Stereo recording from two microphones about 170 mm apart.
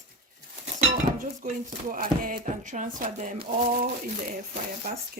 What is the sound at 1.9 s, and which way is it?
Speech, 55° right (ahead or behind).